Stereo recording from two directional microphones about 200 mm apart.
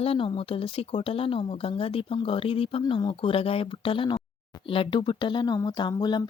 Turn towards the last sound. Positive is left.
turn(degrees=20)  # may be behind; listen again after turning